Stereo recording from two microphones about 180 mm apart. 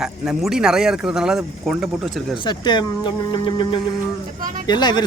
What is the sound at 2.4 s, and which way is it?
Speech, 25° left (ahead or behind).